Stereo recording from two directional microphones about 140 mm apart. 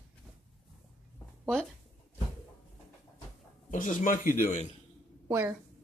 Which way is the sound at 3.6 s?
65° left (ahead or behind).